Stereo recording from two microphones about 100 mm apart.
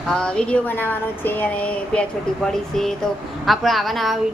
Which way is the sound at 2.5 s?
5° left (ahead or behind).